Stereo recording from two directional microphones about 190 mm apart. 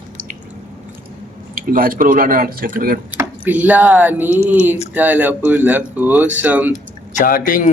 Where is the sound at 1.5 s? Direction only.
50° right (ahead or behind).